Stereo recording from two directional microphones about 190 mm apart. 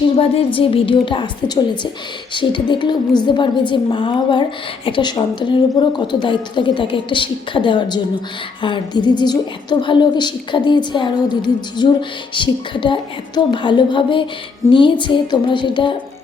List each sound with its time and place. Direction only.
0.2 s a woman's voice: 30° left (ahead or behind)